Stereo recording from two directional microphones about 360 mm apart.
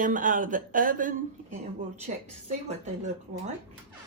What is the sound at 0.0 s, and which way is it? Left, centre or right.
Speech, right.